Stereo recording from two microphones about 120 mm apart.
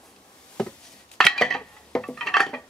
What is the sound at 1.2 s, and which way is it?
Dishes, 5° left (ahead or behind).